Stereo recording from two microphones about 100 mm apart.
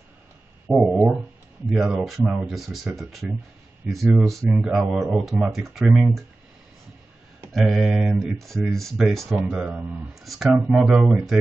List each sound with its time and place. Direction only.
0.7 s speech: 10° right (ahead or behind)
4.5 s speech: 10° right (ahead or behind)
7.5 s speech: centre (ahead or behind)
9.7 s speech: 15° right (ahead or behind)
10.2 s speech: centre (ahead or behind)